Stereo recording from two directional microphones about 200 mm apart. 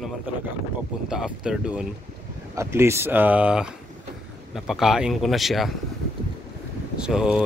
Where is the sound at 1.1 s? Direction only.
5° right (ahead or behind).